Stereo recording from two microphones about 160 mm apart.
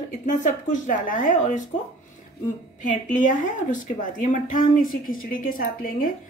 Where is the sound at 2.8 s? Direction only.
55° left (ahead or behind).